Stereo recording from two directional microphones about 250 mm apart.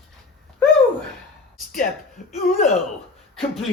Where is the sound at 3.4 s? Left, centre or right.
Centre.